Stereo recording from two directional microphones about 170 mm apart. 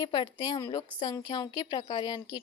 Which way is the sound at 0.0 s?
25° left (ahead or behind).